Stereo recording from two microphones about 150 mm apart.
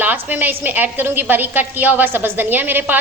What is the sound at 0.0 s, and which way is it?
A woman's voice, 10° right (ahead or behind).